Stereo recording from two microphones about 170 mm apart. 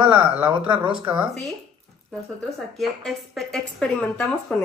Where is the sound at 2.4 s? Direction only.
Centre (ahead or behind).